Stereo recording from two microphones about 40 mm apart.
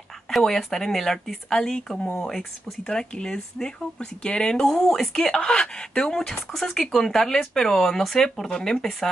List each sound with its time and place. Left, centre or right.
0.6 s speech: centre
8.5 s speech: centre